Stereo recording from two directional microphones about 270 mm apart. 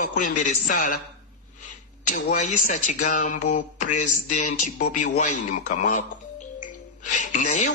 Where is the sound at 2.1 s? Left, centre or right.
Left.